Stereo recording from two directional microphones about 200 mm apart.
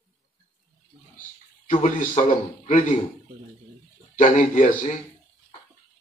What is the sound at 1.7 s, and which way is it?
Speech, 40° left (ahead or behind).